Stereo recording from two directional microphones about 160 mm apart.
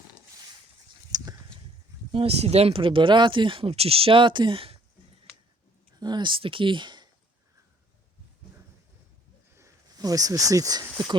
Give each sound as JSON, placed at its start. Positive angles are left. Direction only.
{"t": 1.1, "sound": "a sound", "side_deg": -25}
{"t": 2.1, "sound": "speech", "side_deg": -40}
{"t": 6.0, "sound": "speech", "side_deg": -25}
{"t": 9.6, "sound": "speech", "side_deg": -20}